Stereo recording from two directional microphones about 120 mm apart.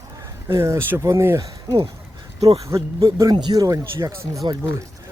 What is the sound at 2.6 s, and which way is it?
Speech, 25° right (ahead or behind).